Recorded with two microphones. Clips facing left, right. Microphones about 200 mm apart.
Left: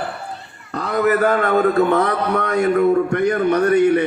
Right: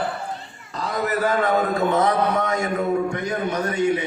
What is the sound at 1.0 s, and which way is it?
A man's voice, 60° left (ahead or behind).